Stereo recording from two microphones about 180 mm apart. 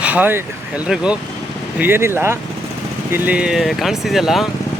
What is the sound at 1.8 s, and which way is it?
Speech, 10° right (ahead or behind).